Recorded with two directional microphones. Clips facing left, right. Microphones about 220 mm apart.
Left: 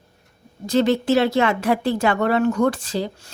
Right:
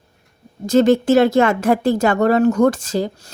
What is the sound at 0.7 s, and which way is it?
Speech, 45° right (ahead or behind).